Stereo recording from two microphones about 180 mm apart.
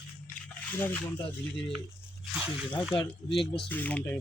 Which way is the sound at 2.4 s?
5° left (ahead or behind).